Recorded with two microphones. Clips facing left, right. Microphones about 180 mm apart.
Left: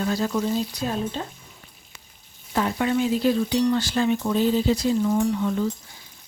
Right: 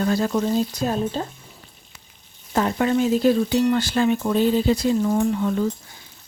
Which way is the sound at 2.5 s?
45° right (ahead or behind).